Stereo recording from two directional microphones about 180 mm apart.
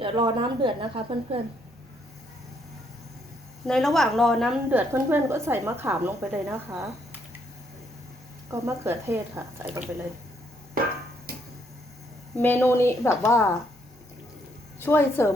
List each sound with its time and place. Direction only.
0.0 s a woman's voice: 25° right (ahead or behind)
3.7 s a woman's voice: centre (ahead or behind)
4.7 s a woman's voice: 10° right (ahead or behind)
8.4 s a woman's voice: 15° right (ahead or behind)
12.4 s a woman's voice: 10° left (ahead or behind)
14.8 s a woman's voice: 10° left (ahead or behind)